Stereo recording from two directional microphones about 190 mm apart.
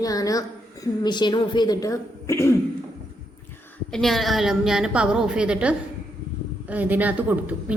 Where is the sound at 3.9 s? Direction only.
Centre (ahead or behind).